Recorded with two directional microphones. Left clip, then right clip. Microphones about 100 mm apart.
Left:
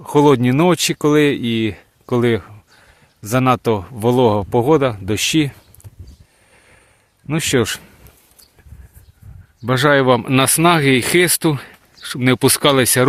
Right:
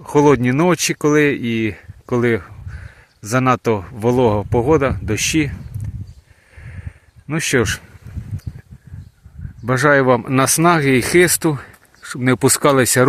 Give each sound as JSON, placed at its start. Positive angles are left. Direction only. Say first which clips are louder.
{"t": 0.0, "sound": "speech", "louder": "even", "side_deg": 15}
{"t": 7.3, "sound": "speech", "louder": "even", "side_deg": 20}
{"t": 9.6, "sound": "speech", "louder": "even", "side_deg": 5}
{"t": 11.5, "sound": "a sound", "louder": "left 2 dB", "side_deg": 15}
{"t": 12.0, "sound": "speech", "louder": "left 1 dB", "side_deg": 5}